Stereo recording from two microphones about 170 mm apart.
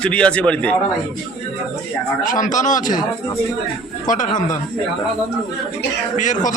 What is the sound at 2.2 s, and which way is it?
Speech, 50° left (ahead or behind).